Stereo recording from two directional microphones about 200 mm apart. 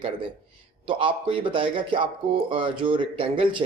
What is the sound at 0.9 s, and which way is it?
A man's voice, 25° right (ahead or behind).